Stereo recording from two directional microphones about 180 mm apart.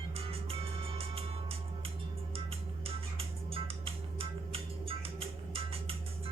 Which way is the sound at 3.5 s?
30° right (ahead or behind).